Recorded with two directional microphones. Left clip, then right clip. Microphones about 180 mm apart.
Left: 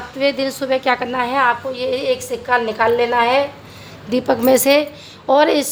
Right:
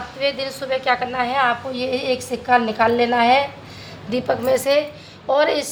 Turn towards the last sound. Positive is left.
turn(degrees=40)  # may be behind; listen again after turning